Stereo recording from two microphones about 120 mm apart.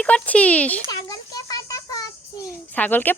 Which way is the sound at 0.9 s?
30° left (ahead or behind).